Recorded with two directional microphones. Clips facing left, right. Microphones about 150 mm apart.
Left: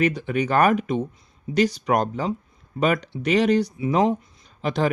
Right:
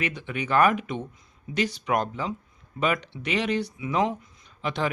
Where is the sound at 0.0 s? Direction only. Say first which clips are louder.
Left 9 dB; 40° left (ahead or behind).